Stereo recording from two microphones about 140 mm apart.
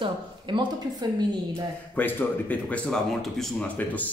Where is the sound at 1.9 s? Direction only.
10° left (ahead or behind).